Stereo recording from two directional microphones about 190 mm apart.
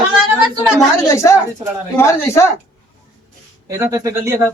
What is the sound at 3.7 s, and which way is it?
Speech, 15° right (ahead or behind).